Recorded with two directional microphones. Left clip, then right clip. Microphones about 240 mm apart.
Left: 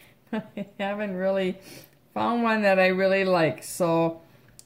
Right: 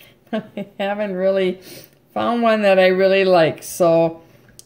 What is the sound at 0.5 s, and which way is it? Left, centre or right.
Speech, centre.